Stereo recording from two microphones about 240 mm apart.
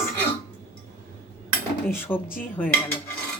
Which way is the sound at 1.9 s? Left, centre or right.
Centre.